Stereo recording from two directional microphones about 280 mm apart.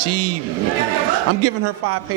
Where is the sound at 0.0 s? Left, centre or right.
Right.